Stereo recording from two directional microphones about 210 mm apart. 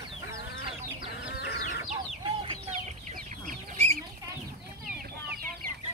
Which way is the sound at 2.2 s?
25° right (ahead or behind).